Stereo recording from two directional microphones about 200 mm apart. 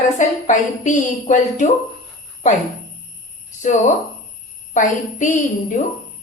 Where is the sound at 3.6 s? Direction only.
35° left (ahead or behind).